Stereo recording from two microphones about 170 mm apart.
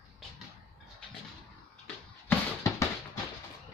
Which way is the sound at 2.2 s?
15° left (ahead or behind).